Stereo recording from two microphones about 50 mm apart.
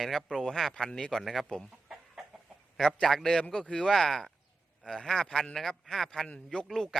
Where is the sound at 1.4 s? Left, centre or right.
Centre.